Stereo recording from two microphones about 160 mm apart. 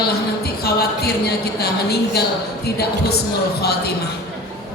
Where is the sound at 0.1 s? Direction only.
80° left.